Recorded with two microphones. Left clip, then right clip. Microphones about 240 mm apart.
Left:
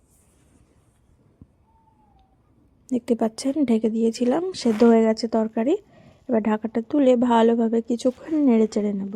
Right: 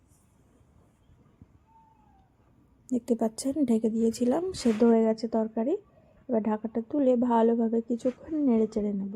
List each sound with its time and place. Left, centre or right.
2.8 s speech: centre
8.0 s a woman's voice: centre